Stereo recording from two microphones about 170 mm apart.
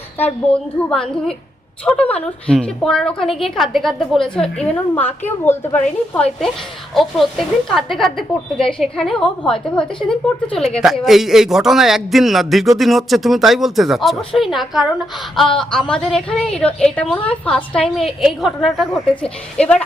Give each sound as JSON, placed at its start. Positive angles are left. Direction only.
{"t": 0.5, "sound": "a woman's voice", "side_deg": 5}